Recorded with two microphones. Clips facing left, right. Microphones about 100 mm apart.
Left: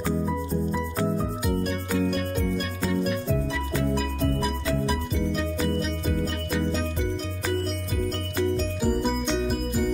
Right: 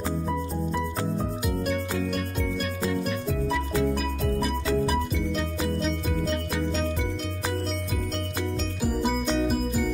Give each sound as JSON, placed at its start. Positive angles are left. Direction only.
{"t": 1.6, "sound": "music", "side_deg": 0}
{"t": 8.8, "sound": "music", "side_deg": -5}